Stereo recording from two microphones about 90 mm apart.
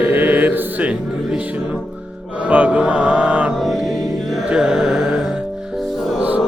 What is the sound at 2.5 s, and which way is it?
Mantra, 15° right (ahead or behind).